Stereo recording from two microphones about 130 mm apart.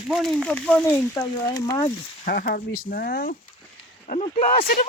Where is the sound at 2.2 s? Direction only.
90° left.